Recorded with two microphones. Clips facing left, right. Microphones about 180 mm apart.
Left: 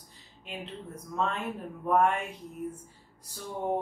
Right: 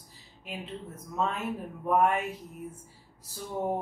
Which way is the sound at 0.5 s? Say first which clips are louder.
Right 1 dB; 5° right (ahead or behind).